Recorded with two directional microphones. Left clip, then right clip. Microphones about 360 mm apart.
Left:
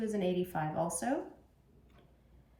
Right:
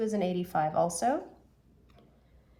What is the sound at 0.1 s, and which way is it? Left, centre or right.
Speech, centre.